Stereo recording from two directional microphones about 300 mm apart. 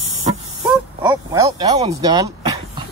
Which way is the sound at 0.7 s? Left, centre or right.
Centre.